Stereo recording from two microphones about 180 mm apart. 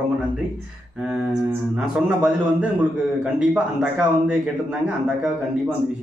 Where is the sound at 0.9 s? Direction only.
5° right (ahead or behind).